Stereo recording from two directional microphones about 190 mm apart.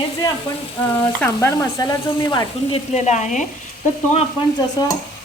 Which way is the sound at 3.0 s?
40° left (ahead or behind).